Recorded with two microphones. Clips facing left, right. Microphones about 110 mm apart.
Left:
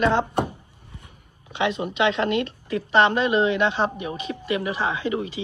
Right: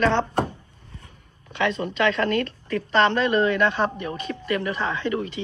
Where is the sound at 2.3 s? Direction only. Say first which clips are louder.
Even; 45° right (ahead or behind).